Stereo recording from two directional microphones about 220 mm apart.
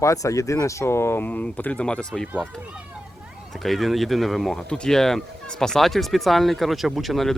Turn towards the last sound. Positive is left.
turn(degrees=0)  # may be behind; listen again after turning